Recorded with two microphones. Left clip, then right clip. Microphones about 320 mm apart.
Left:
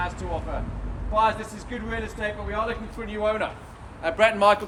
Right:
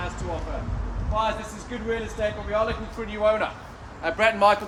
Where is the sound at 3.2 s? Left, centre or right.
Centre.